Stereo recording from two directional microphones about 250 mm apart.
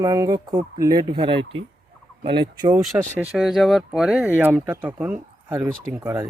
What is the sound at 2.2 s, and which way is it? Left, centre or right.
Turkey, centre.